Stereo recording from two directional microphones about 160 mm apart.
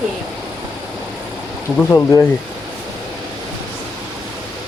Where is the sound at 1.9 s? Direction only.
20° left (ahead or behind).